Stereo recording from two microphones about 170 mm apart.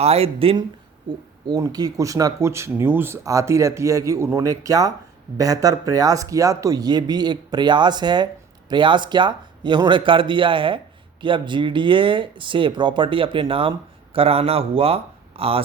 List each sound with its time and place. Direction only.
0.0 s speech: 35° right (ahead or behind)
1.5 s speech: 20° right (ahead or behind)